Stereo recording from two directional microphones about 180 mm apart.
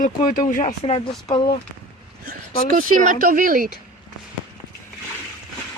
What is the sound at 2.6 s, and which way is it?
Speech, 50° right (ahead or behind).